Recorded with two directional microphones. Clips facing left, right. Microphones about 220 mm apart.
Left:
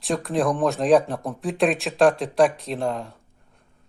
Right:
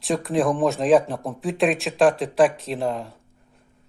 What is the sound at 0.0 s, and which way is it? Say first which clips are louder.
Speech: right 1 dB; centre (ahead or behind).